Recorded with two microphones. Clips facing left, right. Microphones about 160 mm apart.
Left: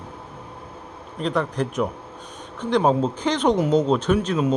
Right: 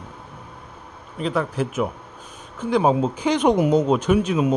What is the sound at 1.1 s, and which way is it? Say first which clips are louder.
A man's voice: even; 5° right (ahead or behind).